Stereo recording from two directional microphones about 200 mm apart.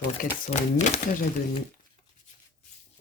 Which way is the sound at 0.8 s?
40° left (ahead or behind).